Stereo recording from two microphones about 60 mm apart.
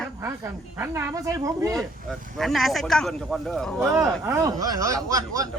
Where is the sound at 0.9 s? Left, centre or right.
Right.